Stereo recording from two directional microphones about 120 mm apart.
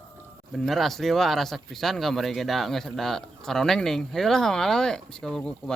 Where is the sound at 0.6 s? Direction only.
Centre (ahead or behind).